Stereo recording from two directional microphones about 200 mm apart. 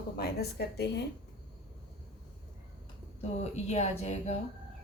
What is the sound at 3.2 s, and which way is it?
A woman's voice, 35° left (ahead or behind).